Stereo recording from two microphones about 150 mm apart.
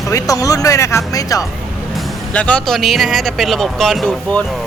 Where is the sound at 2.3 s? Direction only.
10° left (ahead or behind).